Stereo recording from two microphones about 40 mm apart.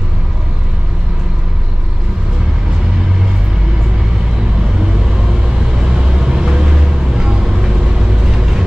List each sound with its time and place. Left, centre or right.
5.9 s vehicle: centre
8.4 s vehicle: centre